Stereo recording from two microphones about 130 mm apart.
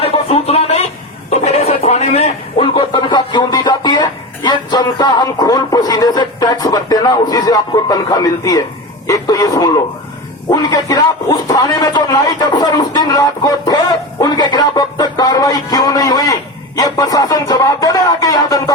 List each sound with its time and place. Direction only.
0.0 s a sound: 50° left (ahead or behind)
2.6 s music: 40° left (ahead or behind)
9.0 s speech: 25° left (ahead or behind)
10.5 s music: 30° left (ahead or behind)
14.2 s speech: 30° left (ahead or behind)